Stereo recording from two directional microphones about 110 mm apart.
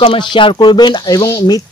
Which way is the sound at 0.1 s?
45° left (ahead or behind).